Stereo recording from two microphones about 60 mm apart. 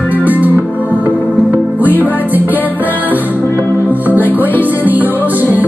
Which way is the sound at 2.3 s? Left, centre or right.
Right.